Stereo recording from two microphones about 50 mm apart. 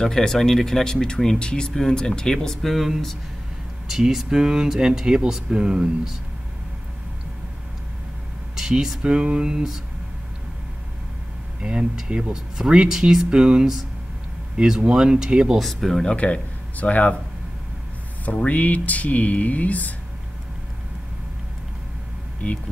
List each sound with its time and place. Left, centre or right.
0.0 s speech: centre
8.5 s speech: centre
11.6 s speech: centre
14.8 s speech: centre
15.6 s speech: centre
16.0 s speech: left
18.2 s speech: left